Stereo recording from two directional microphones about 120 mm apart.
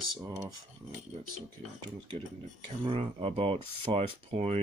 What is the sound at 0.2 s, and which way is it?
Speech, 25° right (ahead or behind).